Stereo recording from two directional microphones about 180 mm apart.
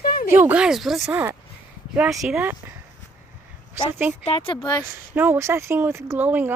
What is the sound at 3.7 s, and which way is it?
Speech, 10° right (ahead or behind).